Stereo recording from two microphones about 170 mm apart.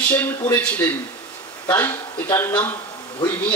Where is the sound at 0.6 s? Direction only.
10° left (ahead or behind).